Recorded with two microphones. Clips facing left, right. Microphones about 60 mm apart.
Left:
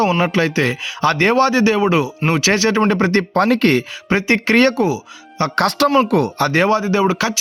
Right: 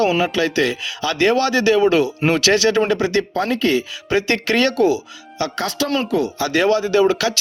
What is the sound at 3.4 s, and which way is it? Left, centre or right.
Speech, left.